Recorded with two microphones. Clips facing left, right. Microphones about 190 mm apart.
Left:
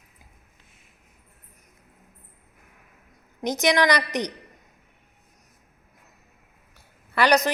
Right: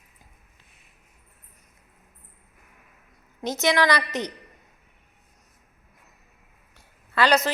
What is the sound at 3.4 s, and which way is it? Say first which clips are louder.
Speech: left 1 dB; 15° left (ahead or behind).